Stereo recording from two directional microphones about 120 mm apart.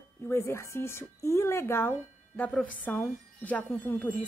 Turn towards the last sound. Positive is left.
turn(degrees=15)  # may be behind; listen again after turning